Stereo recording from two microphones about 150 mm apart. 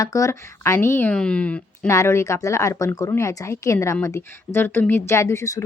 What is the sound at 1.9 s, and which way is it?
A woman's voice, 20° left (ahead or behind).